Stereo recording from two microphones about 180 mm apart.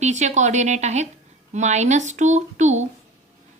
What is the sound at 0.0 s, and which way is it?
A woman's voice, 40° right (ahead or behind).